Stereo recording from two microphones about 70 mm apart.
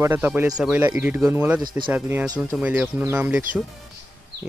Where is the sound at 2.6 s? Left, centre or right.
Right.